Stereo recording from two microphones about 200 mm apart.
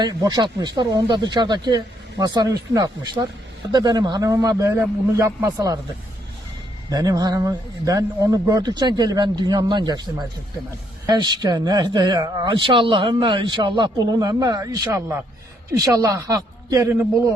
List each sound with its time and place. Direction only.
0.0 s a man's voice: 20° right (ahead or behind)
6.9 s a man's voice: 20° right (ahead or behind)